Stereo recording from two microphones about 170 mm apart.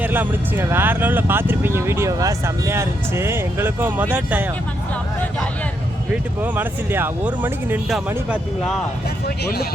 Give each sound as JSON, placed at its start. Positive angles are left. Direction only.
{"t": 0.0, "sound": "speech", "side_deg": -10}
{"t": 6.4, "sound": "speech", "side_deg": -10}
{"t": 9.2, "sound": "speech", "side_deg": 65}